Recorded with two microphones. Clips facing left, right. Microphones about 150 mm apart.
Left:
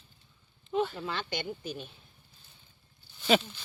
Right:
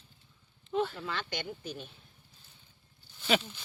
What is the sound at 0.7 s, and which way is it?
Speech, 5° left (ahead or behind).